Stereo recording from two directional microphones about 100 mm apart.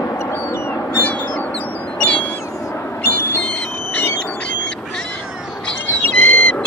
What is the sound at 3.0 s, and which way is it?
Owl, 15° left (ahead or behind).